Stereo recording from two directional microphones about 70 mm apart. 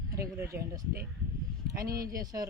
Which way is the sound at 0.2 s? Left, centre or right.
Right.